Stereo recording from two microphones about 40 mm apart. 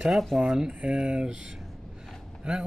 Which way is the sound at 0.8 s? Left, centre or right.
Right.